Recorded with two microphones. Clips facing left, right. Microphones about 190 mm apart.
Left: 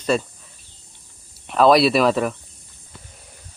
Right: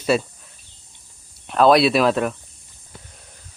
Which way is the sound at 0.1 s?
5° right (ahead or behind).